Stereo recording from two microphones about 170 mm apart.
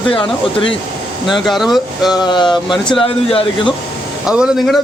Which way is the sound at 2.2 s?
25° left (ahead or behind).